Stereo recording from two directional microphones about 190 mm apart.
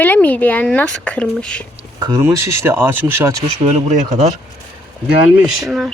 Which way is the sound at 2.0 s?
20° right (ahead or behind).